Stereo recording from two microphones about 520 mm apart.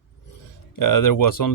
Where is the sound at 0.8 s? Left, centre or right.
Left.